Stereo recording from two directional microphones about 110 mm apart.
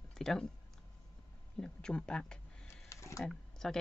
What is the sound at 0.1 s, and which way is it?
Speech, 5° left (ahead or behind).